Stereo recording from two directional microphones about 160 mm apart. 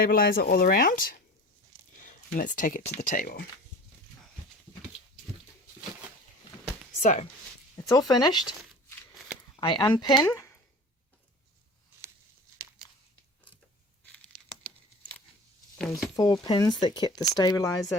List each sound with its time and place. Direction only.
0.1 s speech: 65° left (ahead or behind)
7.0 s speech: 50° left (ahead or behind)
7.9 s speech: 25° left (ahead or behind)
9.6 s speech: 30° left (ahead or behind)
10.2 s a sound: 15° left (ahead or behind)
14.0 s a sound: 10° left (ahead or behind)
16.1 s speech: 25° left (ahead or behind)